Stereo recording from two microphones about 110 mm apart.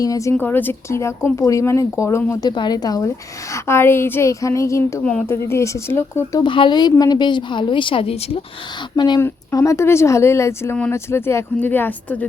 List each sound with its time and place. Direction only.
0.0 s speech: 30° left (ahead or behind)
0.3 s speech: 15° left (ahead or behind)
2.6 s speech: 40° left (ahead or behind)
3.5 s speech: 25° left (ahead or behind)
5.0 s speech: 15° left (ahead or behind)
6.4 s a woman's voice: 45° left (ahead or behind)
9.0 s a woman's voice: 45° left (ahead or behind)
9.2 s speech: 30° left (ahead or behind)